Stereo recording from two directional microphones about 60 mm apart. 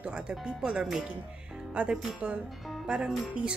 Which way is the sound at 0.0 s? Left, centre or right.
Centre.